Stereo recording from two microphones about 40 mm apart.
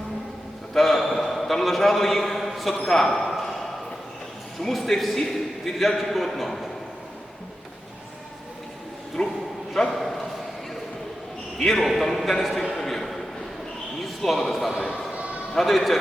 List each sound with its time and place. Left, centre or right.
0.7 s a man's voice: centre
4.6 s a man's voice: centre
9.2 s a man's voice: left
9.9 s a sound: centre
11.5 s a man's voice: centre
12.7 s a sound: centre
14.0 s speech: centre
15.1 s a sound: right
15.5 s a man's voice: centre